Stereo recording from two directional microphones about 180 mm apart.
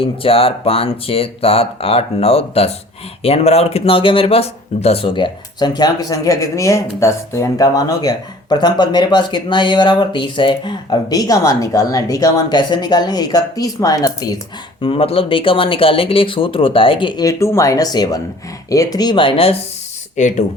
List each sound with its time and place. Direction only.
0.0 s speech: 30° left (ahead or behind)
14.8 s speech: 30° left (ahead or behind)
20.1 s speech: 40° left (ahead or behind)